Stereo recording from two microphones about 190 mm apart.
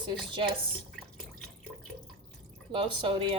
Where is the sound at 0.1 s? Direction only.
25° right (ahead or behind).